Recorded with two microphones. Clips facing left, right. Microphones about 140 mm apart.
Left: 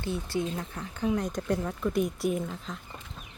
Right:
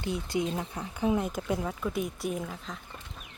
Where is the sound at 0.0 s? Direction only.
15° right (ahead or behind); by 2.8 s centre (ahead or behind).